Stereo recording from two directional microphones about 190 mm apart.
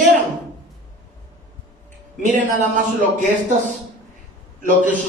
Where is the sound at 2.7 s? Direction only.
40° right (ahead or behind).